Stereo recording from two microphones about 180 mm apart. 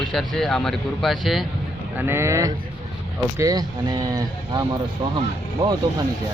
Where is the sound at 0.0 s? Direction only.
Centre (ahead or behind).